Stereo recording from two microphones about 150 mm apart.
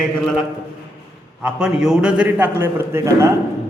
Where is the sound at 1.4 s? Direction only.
5° right (ahead or behind).